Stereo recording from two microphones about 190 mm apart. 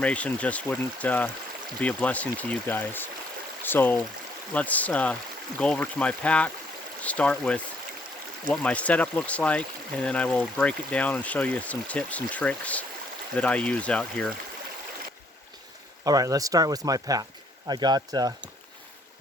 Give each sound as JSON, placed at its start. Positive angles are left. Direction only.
{"t": 0.0, "sound": "speech", "side_deg": 5}
{"t": 16.0, "sound": "speech", "side_deg": -20}